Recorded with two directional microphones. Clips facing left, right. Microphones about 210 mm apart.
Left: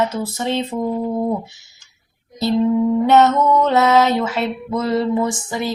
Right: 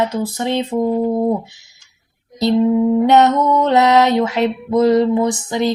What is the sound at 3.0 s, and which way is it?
Music, 15° right (ahead or behind).